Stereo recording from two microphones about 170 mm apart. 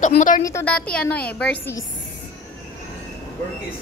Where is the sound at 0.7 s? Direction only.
5° left (ahead or behind).